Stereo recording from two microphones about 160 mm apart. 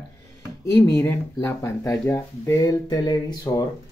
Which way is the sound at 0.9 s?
20° left (ahead or behind).